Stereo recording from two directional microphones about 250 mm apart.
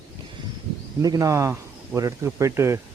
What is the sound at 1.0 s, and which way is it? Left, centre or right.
Speech, centre.